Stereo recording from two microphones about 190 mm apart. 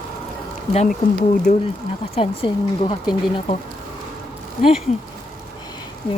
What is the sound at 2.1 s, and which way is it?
Speech, 30° left (ahead or behind).